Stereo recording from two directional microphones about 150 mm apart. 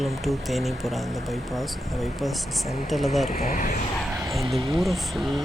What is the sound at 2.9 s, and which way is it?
Speech, centre (ahead or behind).